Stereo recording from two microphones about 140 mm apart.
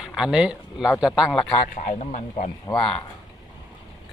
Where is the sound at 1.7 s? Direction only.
65° left (ahead or behind).